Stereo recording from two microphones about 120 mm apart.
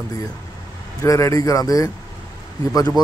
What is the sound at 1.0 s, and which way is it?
Speech, 25° left (ahead or behind).